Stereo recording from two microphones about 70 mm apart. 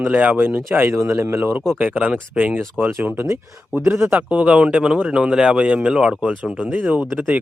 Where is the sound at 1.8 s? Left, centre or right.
Right.